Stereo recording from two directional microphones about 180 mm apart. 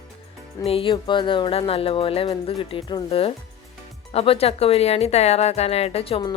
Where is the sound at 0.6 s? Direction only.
30° left (ahead or behind).